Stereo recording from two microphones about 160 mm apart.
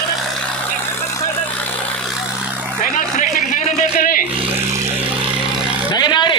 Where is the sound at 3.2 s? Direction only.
50° left (ahead or behind).